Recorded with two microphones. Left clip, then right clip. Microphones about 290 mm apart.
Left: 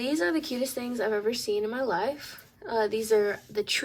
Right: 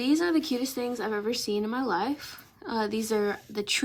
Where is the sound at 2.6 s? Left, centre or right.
Right.